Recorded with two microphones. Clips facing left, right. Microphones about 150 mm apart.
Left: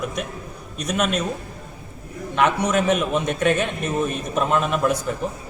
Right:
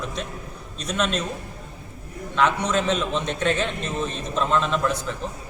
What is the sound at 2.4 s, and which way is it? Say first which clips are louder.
A man's voice: left 2 dB; 15° left (ahead or behind).